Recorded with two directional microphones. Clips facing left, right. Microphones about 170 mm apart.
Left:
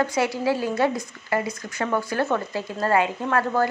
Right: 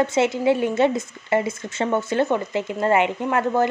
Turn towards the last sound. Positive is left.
turn(degrees=-20)  # may be behind; listen again after turning